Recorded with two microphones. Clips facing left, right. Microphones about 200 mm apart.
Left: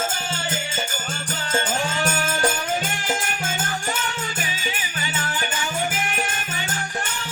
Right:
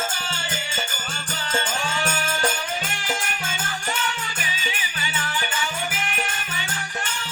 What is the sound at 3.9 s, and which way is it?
Music, 45° left (ahead or behind).